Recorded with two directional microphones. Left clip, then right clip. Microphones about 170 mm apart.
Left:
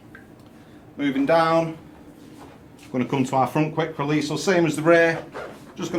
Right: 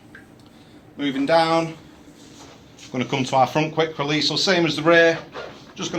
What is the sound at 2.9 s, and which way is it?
Speech, 20° right (ahead or behind).